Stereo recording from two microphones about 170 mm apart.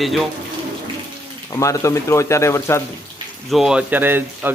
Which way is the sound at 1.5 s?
20° left (ahead or behind).